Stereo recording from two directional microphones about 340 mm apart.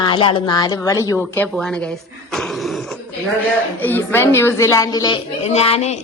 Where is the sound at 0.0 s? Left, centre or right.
Centre.